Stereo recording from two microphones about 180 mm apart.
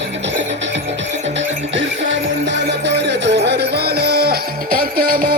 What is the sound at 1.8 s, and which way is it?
Music, 90° right.